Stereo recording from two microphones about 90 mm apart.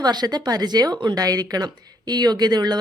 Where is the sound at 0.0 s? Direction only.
50° right (ahead or behind).